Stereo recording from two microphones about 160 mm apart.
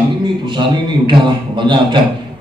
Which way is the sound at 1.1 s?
30° right (ahead or behind).